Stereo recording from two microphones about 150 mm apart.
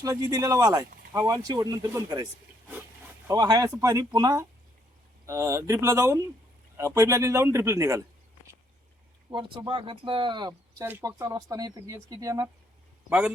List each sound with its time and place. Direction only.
0.0 s speech: 25° right (ahead or behind)
3.2 s speech: 25° right (ahead or behind)
9.3 s speech: 35° right (ahead or behind)
10.8 s speech: 15° right (ahead or behind)
13.1 s a man's voice: 5° right (ahead or behind)